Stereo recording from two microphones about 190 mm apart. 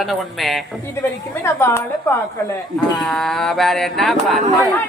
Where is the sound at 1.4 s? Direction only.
15° left (ahead or behind).